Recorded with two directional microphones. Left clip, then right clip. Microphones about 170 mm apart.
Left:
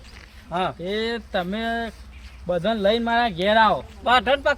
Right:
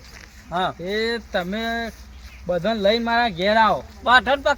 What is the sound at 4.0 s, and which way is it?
Speech, 20° left (ahead or behind).